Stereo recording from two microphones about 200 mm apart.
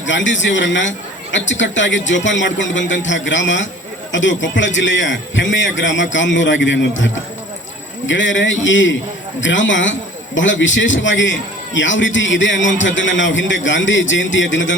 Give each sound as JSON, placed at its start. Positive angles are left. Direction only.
{"t": 0.0, "sound": "a man's voice", "side_deg": 65}